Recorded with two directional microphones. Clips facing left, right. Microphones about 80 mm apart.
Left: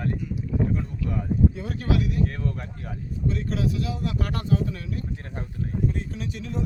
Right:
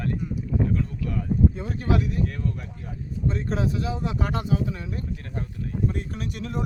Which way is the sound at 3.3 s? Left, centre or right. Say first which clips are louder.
Even; right.